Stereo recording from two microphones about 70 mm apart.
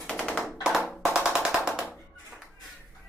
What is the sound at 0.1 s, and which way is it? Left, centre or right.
Music, centre.